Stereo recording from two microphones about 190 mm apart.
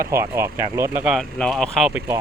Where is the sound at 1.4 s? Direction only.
5° left (ahead or behind).